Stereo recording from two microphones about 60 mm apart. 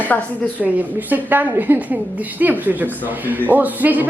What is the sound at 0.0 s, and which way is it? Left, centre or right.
Speech, left.